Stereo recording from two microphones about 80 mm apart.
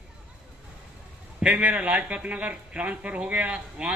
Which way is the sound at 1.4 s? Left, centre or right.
Centre.